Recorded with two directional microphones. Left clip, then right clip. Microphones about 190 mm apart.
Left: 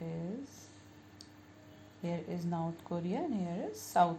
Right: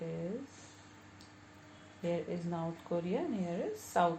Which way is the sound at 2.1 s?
40° left (ahead or behind).